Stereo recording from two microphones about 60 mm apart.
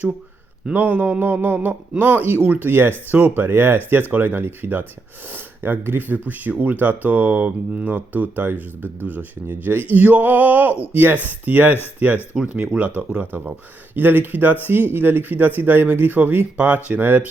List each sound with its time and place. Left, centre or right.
0.7 s speech: right
1.2 s speech: right
3.1 s speech: right
3.3 s speech: right
8.5 s speech: left
9.0 s speech: right
12.7 s speech: centre
13.1 s speech: right